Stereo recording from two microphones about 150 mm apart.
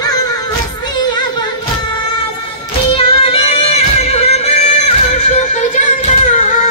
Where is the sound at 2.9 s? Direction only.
40° left (ahead or behind).